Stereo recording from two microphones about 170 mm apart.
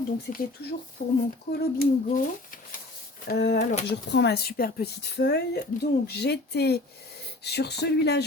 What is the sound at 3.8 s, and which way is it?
Speech, 80° left.